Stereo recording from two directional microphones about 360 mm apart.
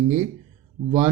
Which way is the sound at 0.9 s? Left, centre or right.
Centre.